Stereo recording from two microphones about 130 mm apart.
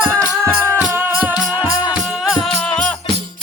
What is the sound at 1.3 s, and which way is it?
Music, 30° left (ahead or behind).